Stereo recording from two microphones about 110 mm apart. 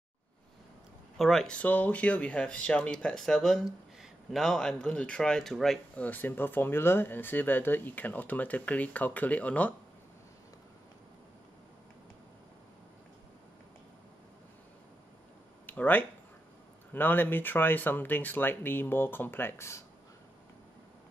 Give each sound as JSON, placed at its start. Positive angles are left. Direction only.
{"t": 1.1, "sound": "speech", "side_deg": 0}
{"t": 6.0, "sound": "speech", "side_deg": 15}
{"t": 15.6, "sound": "speech", "side_deg": 15}